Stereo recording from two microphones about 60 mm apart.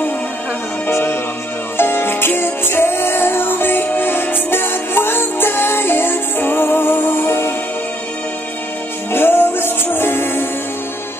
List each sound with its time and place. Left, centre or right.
1.8 s music: left
9.1 s music: left